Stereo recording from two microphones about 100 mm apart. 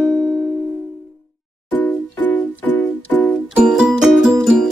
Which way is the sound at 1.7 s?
15° left (ahead or behind).